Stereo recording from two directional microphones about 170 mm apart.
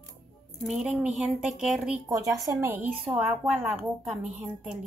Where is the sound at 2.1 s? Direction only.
20° right (ahead or behind).